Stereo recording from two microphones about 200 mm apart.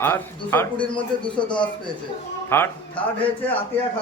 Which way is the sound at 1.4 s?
5° left (ahead or behind).